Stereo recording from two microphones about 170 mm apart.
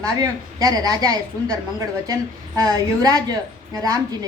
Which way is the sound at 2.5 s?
20° right (ahead or behind).